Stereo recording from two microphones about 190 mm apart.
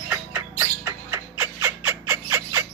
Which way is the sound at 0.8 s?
15° right (ahead or behind).